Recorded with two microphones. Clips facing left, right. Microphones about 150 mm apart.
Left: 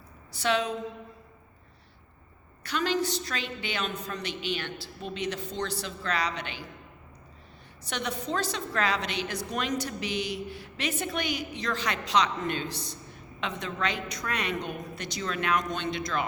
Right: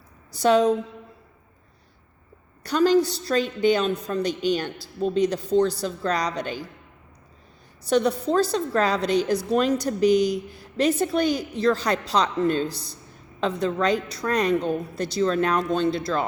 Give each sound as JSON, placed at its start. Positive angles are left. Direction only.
{"t": 0.3, "sound": "speech", "side_deg": -40}
{"t": 2.6, "sound": "speech", "side_deg": -40}
{"t": 7.9, "sound": "speech", "side_deg": -35}